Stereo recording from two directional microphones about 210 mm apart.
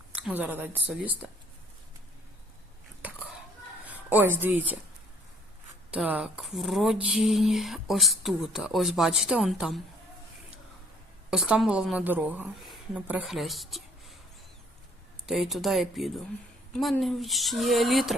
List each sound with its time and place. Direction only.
0.2 s speech: 5° right (ahead or behind)
3.8 s speech: 10° right (ahead or behind)
5.9 s speech: 5° right (ahead or behind)
11.3 s speech: 5° right (ahead or behind)
15.3 s speech: centre (ahead or behind)